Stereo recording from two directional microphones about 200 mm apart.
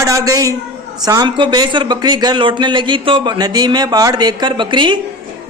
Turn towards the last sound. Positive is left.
turn(degrees=-25)  # may be behind; listen again after turning